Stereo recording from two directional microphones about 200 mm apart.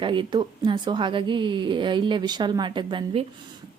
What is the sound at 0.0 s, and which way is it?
A woman's voice, 25° right (ahead or behind).